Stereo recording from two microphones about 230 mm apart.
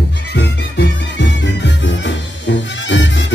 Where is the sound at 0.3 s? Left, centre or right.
Left.